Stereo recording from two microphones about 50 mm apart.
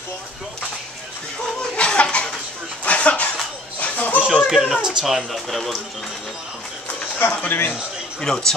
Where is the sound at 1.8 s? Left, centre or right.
Left.